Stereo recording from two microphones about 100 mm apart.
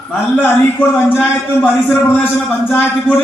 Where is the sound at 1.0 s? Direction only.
20° left (ahead or behind).